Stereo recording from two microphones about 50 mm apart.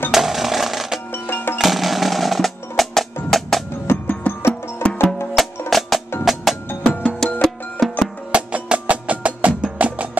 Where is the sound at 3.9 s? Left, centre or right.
Left.